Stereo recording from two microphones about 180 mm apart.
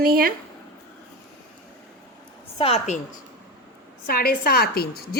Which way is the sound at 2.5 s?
35° left (ahead or behind).